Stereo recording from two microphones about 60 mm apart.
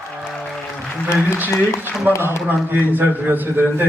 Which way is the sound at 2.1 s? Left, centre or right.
Right.